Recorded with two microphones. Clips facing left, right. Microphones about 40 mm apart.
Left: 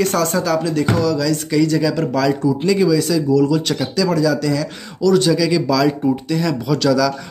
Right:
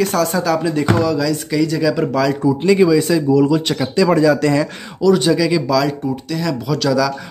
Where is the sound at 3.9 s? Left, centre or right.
Right.